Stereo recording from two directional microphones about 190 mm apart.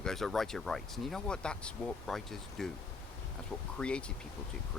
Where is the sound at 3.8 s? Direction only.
5° left (ahead or behind).